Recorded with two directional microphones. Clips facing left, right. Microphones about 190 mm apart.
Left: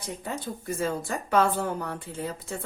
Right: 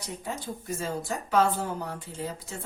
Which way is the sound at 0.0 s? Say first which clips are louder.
Left 2 dB; 55° left (ahead or behind).